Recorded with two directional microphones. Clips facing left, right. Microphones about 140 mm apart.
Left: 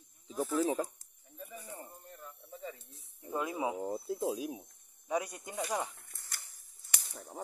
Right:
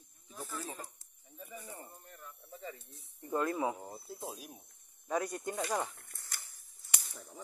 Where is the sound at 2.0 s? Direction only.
20° left (ahead or behind).